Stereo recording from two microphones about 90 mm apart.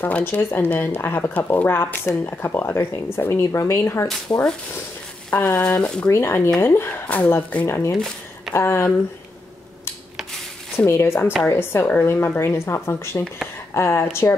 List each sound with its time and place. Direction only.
0.0 s speech: 25° left (ahead or behind)
5.3 s speech: 20° left (ahead or behind)
5.8 s speech: 10° left (ahead or behind)
6.0 s speech: 30° left (ahead or behind)
10.9 s speech: 30° left (ahead or behind)